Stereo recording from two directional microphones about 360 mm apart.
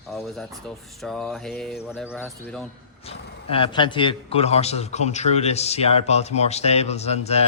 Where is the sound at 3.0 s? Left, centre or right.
Centre.